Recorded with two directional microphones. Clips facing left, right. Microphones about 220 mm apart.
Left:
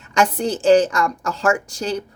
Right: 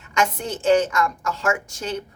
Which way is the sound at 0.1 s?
35° left (ahead or behind).